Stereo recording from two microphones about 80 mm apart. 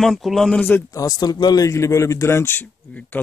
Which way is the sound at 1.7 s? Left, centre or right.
Left.